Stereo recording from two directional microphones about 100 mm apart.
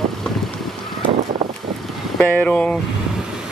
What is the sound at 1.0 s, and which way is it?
Vehicle, 55° right (ahead or behind).